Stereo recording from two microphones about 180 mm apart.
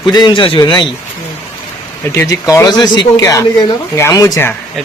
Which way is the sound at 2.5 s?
20° left (ahead or behind).